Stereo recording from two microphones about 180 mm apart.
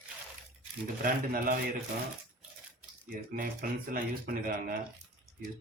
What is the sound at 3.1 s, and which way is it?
Speech, 50° right (ahead or behind).